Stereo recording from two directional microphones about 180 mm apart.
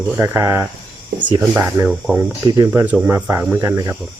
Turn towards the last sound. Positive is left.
turn(degrees=-15)  # may be behind; listen again after turning